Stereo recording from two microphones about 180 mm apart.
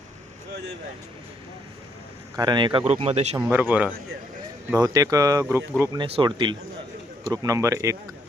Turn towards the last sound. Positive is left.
turn(degrees=-15)  # may be behind; listen again after turning